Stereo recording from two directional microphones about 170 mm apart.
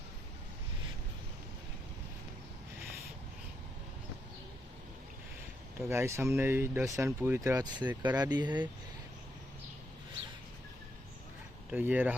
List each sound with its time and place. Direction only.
5.8 s speech: 15° right (ahead or behind)
11.7 s speech: 10° right (ahead or behind)